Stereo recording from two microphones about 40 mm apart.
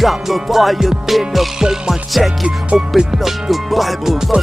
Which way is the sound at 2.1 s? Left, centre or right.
Centre.